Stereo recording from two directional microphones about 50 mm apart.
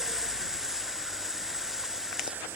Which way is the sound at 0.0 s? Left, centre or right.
Centre.